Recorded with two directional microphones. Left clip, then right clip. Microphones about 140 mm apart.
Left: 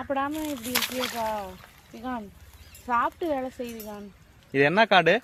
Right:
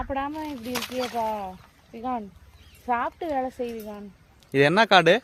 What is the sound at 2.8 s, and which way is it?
Speech, 65° right (ahead or behind).